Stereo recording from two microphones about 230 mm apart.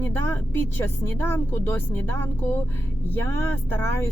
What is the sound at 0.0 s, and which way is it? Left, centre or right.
Speech, centre.